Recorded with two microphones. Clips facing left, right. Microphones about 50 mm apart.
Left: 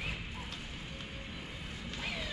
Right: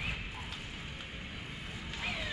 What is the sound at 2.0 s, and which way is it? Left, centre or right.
Vehicle, centre.